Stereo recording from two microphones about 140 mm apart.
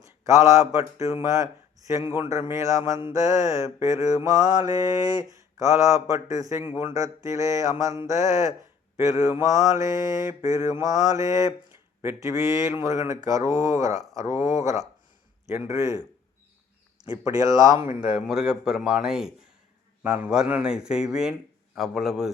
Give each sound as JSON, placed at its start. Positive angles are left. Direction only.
{"t": 0.0, "sound": "speech", "side_deg": -20}
{"t": 1.0, "sound": "mantra", "side_deg": -25}
{"t": 17.3, "sound": "mantra", "side_deg": -25}
{"t": 18.1, "sound": "a man's voice", "side_deg": -5}